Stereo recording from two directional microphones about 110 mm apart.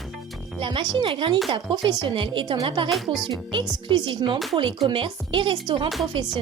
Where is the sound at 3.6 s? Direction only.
45° right (ahead or behind).